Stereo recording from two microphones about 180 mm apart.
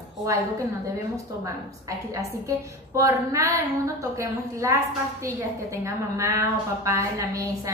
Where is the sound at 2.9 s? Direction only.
15° right (ahead or behind).